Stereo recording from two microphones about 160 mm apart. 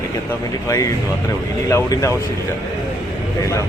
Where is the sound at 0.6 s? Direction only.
20° left (ahead or behind).